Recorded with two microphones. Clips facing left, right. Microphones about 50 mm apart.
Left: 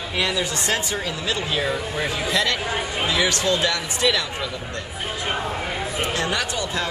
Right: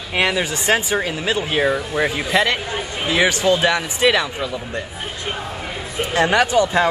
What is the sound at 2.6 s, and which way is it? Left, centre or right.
Speech, centre.